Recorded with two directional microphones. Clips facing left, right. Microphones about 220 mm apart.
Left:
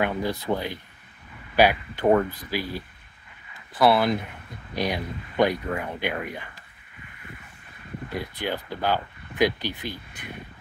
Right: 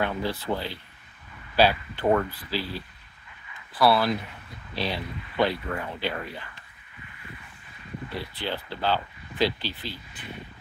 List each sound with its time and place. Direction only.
0.0 s speech: 15° left (ahead or behind)
8.1 s speech: 15° left (ahead or behind)